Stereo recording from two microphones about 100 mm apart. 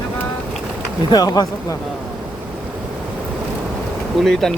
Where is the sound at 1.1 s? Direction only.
45° left (ahead or behind).